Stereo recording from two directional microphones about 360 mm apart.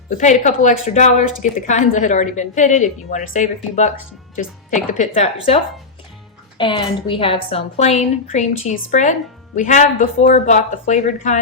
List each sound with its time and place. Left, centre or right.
0.1 s a woman's voice: centre